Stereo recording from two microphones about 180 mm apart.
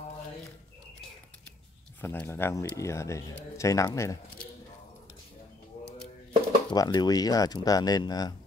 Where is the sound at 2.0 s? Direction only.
10° left (ahead or behind).